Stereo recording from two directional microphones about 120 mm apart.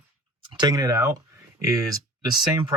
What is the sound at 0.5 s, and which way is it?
Speech, 35° right (ahead or behind).